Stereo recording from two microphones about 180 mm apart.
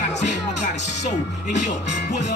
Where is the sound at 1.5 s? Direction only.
40° left (ahead or behind).